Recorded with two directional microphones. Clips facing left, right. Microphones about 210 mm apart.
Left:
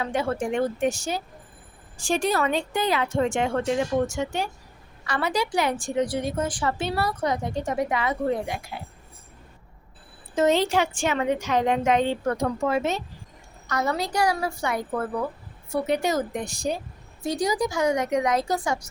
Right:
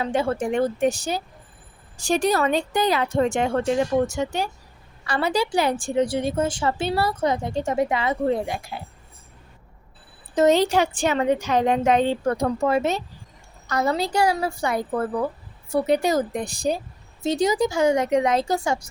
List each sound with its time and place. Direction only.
0.0 s a woman's voice: 30° right (ahead or behind)
10.3 s a woman's voice: 40° right (ahead or behind)
17.2 s a woman's voice: 25° right (ahead or behind)